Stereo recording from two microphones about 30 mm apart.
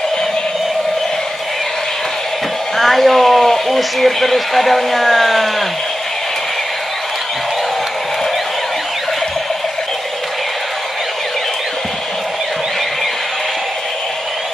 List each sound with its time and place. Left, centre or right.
2.8 s speech: centre